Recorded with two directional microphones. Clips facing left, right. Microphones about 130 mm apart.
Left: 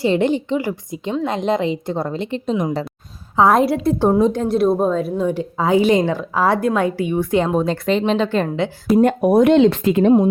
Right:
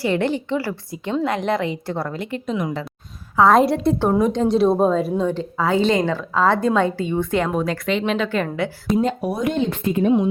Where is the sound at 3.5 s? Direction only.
Centre (ahead or behind).